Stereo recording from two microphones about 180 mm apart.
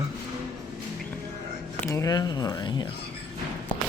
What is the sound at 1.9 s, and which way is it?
Speech, 20° left (ahead or behind).